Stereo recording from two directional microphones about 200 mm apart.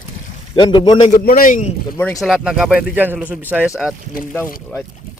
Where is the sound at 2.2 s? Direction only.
5° right (ahead or behind).